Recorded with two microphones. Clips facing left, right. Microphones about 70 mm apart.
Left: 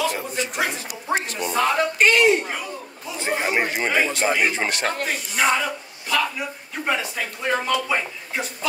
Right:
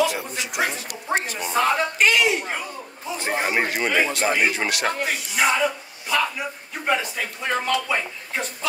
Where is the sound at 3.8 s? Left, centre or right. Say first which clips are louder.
Even; left.